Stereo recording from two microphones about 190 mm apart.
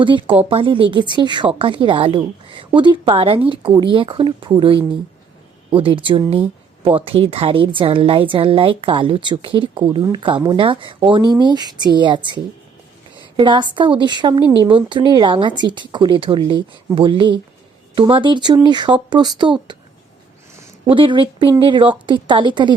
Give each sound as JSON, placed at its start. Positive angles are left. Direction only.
{"t": 0.0, "sound": "a woman's voice", "side_deg": -25}
{"t": 20.8, "sound": "a woman's voice", "side_deg": -25}